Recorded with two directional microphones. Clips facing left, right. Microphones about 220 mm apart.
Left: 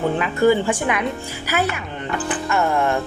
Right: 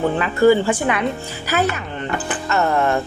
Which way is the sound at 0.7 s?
10° left (ahead or behind).